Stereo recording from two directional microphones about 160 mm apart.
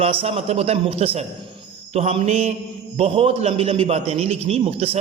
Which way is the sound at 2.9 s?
40° right (ahead or behind).